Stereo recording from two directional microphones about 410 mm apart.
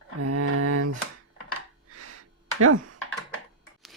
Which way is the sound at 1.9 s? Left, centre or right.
Right.